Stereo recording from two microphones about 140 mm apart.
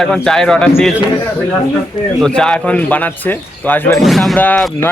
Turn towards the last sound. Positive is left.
turn(degrees=10)  # may be behind; listen again after turning